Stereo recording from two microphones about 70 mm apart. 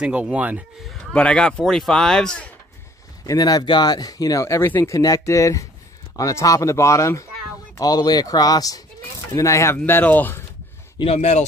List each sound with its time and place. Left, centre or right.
0.0 s speech: centre
1.1 s speech: centre
3.3 s speech: left
7.8 s speech: left
9.3 s speech: left
9.8 s speech: left
11.0 s speech: left